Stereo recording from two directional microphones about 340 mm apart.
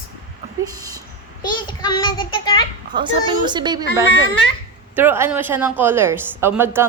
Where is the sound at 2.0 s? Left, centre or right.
Centre.